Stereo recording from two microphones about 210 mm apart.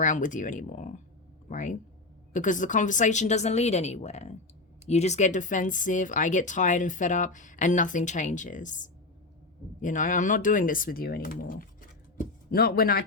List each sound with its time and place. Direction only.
0.0 s speech: 35° left (ahead or behind)